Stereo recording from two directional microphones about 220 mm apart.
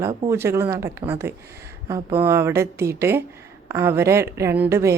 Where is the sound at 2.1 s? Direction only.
10° right (ahead or behind).